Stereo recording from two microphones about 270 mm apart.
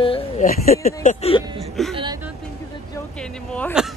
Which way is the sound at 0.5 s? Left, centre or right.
Left.